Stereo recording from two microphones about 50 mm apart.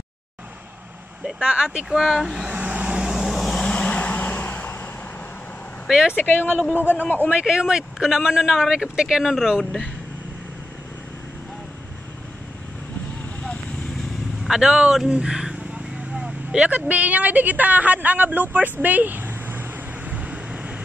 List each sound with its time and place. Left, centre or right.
1.4 s speech: centre
2.0 s speech: centre
2.5 s vehicle: right; by 3.6 s centre
3.6 s vehicle: left
5.9 s speech: centre
6.1 s speech: left
7.4 s speech: centre
14.4 s speech: centre
15.0 s vehicle: centre
16.7 s a woman's voice: right
20.1 s vehicle: right